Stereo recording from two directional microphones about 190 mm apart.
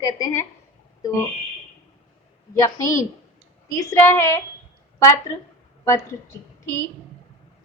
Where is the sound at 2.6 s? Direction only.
15° left (ahead or behind).